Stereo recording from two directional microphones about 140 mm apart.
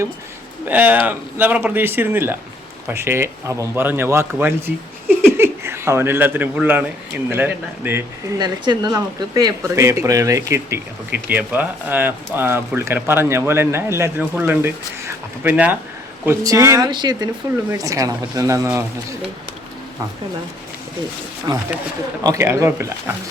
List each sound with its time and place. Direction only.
0.7 s speech: 10° right (ahead or behind)
8.4 s speech: 30° right (ahead or behind)
21.5 s speech: 30° right (ahead or behind)